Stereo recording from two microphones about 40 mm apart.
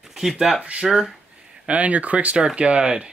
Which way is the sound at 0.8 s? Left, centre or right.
Centre.